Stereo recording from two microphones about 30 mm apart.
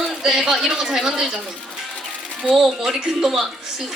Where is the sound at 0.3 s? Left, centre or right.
Centre.